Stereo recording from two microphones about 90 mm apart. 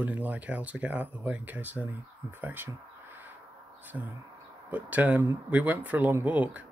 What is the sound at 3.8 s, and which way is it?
Speech, 20° right (ahead or behind).